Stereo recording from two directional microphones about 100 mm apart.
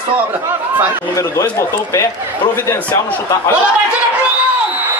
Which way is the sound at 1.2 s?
35° left (ahead or behind).